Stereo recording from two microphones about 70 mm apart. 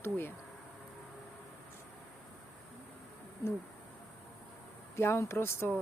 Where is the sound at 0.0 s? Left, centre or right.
Left.